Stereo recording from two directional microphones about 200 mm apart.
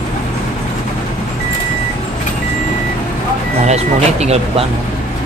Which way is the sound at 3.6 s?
35° right (ahead or behind).